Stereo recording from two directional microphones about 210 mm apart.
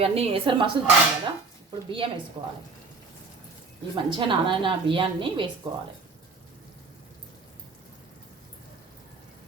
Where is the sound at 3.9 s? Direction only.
25° right (ahead or behind).